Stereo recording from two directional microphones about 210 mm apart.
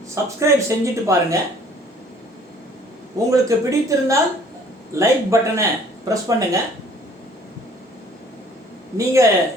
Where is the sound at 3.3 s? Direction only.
15° right (ahead or behind).